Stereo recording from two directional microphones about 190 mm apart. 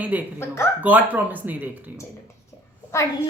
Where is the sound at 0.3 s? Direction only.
15° left (ahead or behind).